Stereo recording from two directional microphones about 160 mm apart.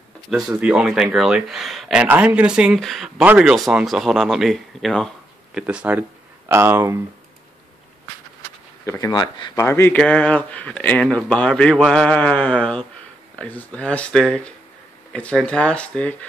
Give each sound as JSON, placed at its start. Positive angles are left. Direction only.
{"t": 0.3, "sound": "speech", "side_deg": 0}
{"t": 8.8, "sound": "speech", "side_deg": 20}
{"t": 9.7, "sound": "speech", "side_deg": 15}